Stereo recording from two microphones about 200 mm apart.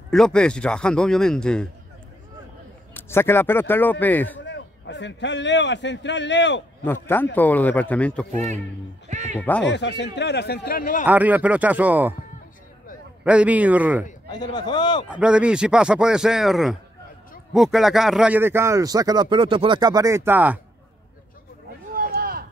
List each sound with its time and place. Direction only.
0.1 s speech: 5° left (ahead or behind)
2.9 s speech: 10° left (ahead or behind)
4.4 s a man's voice: 60° left (ahead or behind)
6.8 s speech: 10° left (ahead or behind)
8.3 s a man's voice: 35° right (ahead or behind)
9.1 s cat: 35° right (ahead or behind)
9.4 s speech: 5° left (ahead or behind)
9.7 s speech: 60° left (ahead or behind); by 11.1 s 45° left (ahead or behind)
11.1 s speech: 10° right (ahead or behind)
13.2 s speech: 5° right (ahead or behind)
14.3 s a man's voice: 20° left (ahead or behind)
15.0 s speech: 5° right (ahead or behind)
21.9 s a sound: 45° right (ahead or behind)